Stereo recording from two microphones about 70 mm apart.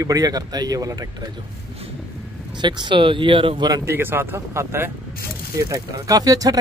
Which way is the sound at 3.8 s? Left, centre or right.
Right.